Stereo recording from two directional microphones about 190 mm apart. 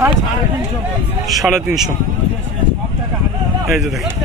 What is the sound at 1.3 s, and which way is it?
Speech, centre (ahead or behind).